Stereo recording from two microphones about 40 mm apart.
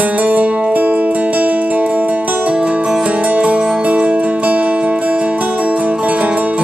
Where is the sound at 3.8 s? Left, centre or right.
Right.